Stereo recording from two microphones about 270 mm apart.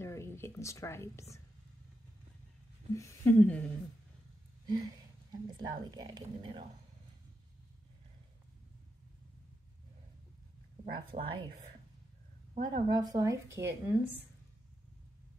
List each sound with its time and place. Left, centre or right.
0.0 s a sound: centre
2.9 s speech: centre
4.6 s a woman's voice: centre
11.0 s a woman's voice: centre
12.5 s a woman's voice: centre